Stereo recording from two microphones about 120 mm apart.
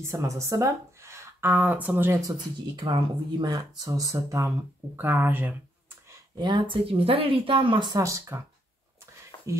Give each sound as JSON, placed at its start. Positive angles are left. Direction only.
{"t": 0.0, "sound": "speech", "side_deg": -25}
{"t": 2.9, "sound": "speech", "side_deg": -35}
{"t": 4.9, "sound": "speech", "side_deg": -15}
{"t": 6.0, "sound": "speech", "side_deg": -35}
{"t": 9.3, "sound": "a sound", "side_deg": 45}